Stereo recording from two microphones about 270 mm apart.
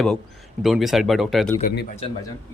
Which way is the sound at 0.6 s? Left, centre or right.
Centre.